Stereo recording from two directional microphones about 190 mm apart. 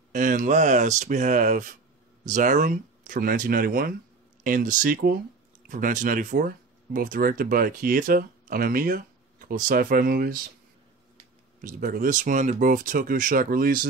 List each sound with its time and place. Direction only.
0.1 s speech: 45° right (ahead or behind)
11.6 s speech: 45° right (ahead or behind)